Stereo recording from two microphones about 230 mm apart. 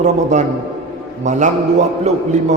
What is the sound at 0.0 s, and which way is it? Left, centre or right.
A man's voice, right.